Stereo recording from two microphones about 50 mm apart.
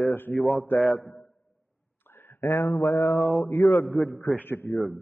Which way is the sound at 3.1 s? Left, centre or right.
Centre.